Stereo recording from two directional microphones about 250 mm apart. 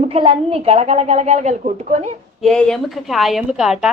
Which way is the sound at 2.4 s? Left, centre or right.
Centre.